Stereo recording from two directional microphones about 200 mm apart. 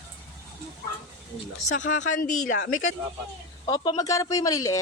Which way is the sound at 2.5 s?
70° left (ahead or behind).